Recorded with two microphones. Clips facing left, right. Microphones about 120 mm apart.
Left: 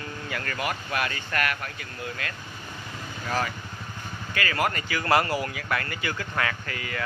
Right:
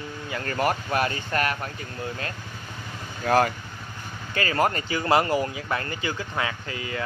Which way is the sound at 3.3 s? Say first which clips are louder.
Right 8 dB; 50° right (ahead or behind).